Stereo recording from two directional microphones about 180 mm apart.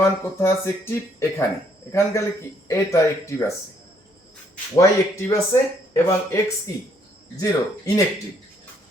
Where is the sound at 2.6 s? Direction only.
15° left (ahead or behind).